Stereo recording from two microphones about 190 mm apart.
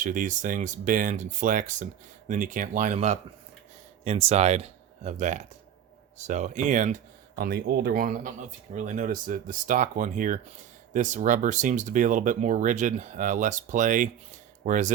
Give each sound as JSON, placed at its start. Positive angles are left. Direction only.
{"t": 0.0, "sound": "speech", "side_deg": -45}
{"t": 7.3, "sound": "speech", "side_deg": -55}